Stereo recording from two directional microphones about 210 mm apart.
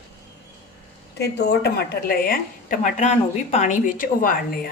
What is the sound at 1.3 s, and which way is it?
A woman's voice, 50° left (ahead or behind).